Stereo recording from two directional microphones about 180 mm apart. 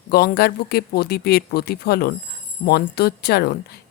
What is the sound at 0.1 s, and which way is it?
Speech, 60° left (ahead or behind).